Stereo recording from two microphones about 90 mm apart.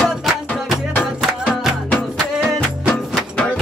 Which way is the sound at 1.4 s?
5° right (ahead or behind).